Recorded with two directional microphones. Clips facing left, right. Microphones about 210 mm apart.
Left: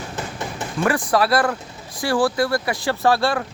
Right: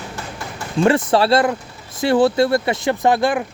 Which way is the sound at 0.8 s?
25° right (ahead or behind).